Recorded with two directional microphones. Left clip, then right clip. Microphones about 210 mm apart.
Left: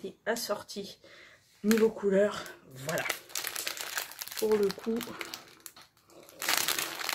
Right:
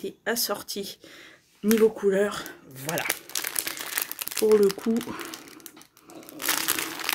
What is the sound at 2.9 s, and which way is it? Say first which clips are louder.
Crumpling: right 4 dB; 25° right (ahead or behind).